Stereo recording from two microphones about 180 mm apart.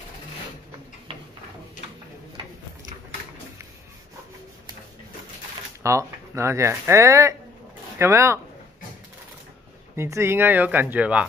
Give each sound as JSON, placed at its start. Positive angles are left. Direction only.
{"t": 5.8, "sound": "speech", "side_deg": -15}
{"t": 9.9, "sound": "speech", "side_deg": -15}